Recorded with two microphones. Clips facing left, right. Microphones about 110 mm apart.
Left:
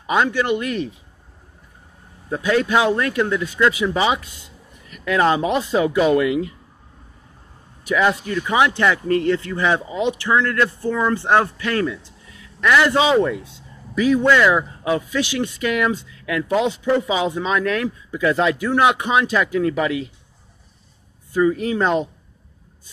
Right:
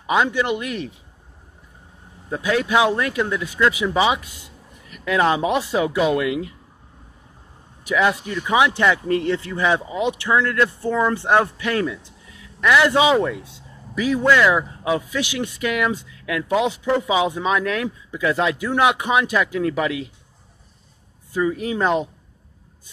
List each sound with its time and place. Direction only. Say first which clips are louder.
0.0 s speech: even; 10° right (ahead or behind)
2.4 s speech: left 1 dB; 10° right (ahead or behind)
7.8 s speech: left 1 dB; 10° right (ahead or behind)
21.4 s speech: left 3 dB; 5° right (ahead or behind)